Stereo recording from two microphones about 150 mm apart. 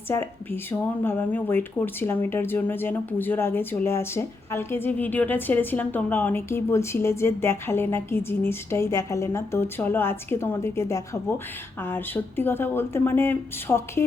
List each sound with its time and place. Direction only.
0.1 s speech: 15° left (ahead or behind)